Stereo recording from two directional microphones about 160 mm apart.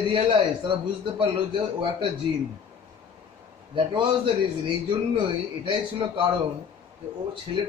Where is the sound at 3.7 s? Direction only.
35° right (ahead or behind).